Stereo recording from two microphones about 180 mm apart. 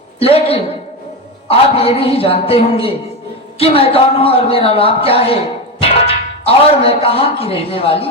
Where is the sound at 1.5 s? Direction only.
35° left (ahead or behind).